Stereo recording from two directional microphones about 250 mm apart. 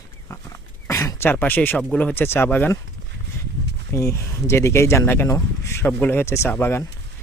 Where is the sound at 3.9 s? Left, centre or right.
Centre.